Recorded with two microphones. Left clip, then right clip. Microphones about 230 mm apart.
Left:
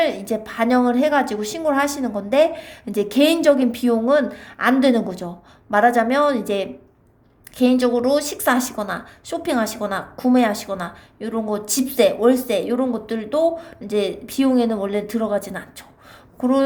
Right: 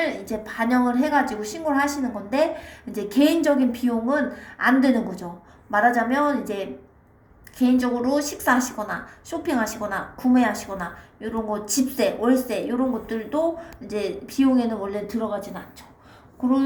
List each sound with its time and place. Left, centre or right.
0.0 s a woman's voice: left
7.6 s a woman's voice: left